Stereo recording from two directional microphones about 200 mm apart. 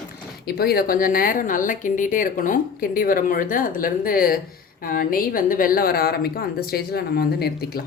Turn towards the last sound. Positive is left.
turn(degrees=50)  # may be behind; listen again after turning